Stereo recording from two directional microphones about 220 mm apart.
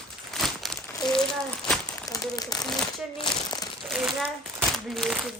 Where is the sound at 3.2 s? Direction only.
20° left (ahead or behind).